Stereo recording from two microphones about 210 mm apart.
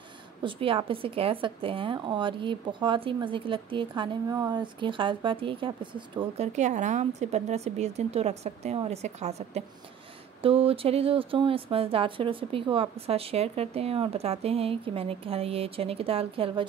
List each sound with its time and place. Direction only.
0.4 s a woman's voice: 25° right (ahead or behind)